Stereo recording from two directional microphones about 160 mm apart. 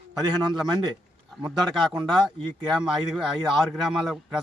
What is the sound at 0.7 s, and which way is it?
Speech, 25° right (ahead or behind).